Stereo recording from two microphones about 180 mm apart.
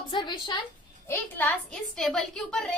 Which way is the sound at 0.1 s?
25° left (ahead or behind).